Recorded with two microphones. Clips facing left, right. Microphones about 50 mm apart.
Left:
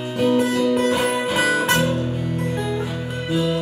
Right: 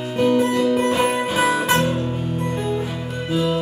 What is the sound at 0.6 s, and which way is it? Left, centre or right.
Music, centre.